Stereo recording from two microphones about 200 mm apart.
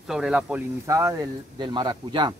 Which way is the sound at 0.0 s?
Centre (ahead or behind).